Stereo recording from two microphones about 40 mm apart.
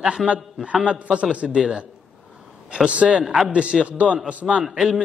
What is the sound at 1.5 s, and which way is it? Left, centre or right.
A man's voice, centre.